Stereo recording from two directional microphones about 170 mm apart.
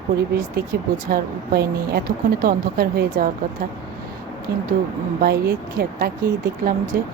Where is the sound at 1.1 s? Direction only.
65° right (ahead or behind).